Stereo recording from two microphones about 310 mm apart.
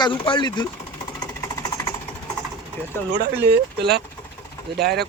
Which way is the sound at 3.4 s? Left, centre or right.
Right.